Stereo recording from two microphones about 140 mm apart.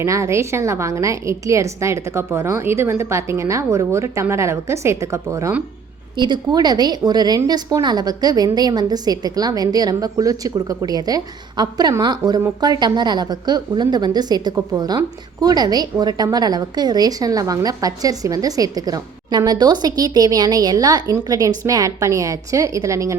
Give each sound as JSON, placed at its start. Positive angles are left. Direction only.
{"t": 0.0, "sound": "a woman's voice", "side_deg": -20}
{"t": 6.1, "sound": "a woman's voice", "side_deg": -35}